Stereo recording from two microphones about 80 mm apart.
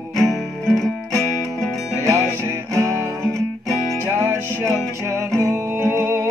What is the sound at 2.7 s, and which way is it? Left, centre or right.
Music, right.